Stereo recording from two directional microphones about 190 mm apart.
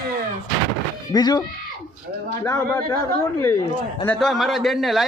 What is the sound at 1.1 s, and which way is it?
Speech, 20° left (ahead or behind).